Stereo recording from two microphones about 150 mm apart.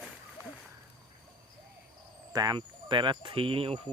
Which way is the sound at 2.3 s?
25° right (ahead or behind).